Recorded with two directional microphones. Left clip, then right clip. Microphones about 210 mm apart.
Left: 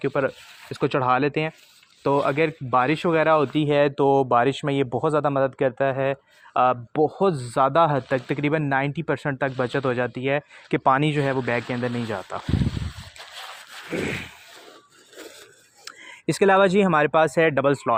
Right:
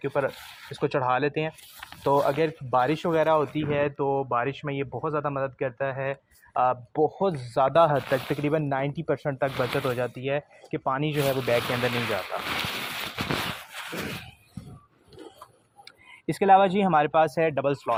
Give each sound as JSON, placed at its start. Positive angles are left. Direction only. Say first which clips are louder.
{"t": 0.0, "sound": "speech", "louder": "left 3 dB", "side_deg": 50}
{"t": 11.4, "sound": "speech", "louder": "right 1 dB", "side_deg": 35}
{"t": 12.3, "sound": "speech", "louder": "right 1 dB", "side_deg": 50}
{"t": 13.9, "sound": "a sound", "louder": "left 7 dB", "side_deg": 55}
{"t": 15.8, "sound": "speech", "louder": "left 7 dB", "side_deg": 50}